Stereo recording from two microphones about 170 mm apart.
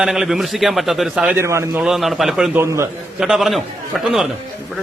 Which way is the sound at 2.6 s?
15° right (ahead or behind).